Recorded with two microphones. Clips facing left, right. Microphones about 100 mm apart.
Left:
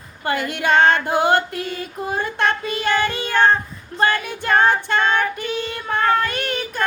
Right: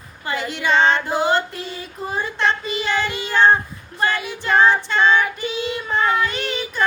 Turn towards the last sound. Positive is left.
turn(degrees=50)  # may be behind; listen again after turning